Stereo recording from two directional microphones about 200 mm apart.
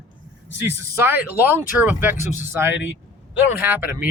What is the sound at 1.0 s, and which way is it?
Speech, 10° right (ahead or behind).